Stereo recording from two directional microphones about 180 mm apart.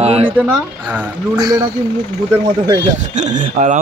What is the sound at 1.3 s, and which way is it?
Speech, 20° right (ahead or behind).